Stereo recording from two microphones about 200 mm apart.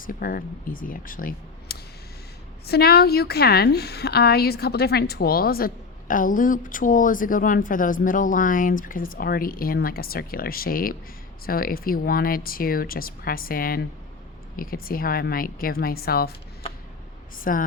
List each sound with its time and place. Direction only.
0.0 s a woman's voice: 45° left (ahead or behind)
17.5 s a woman's voice: 45° left (ahead or behind)